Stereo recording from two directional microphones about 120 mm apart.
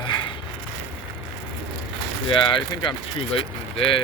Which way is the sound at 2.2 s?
45° left (ahead or behind).